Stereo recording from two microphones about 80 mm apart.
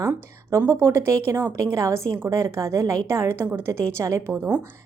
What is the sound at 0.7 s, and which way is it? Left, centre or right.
Speech, right.